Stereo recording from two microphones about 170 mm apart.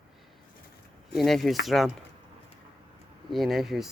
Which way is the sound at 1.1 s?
Centre (ahead or behind).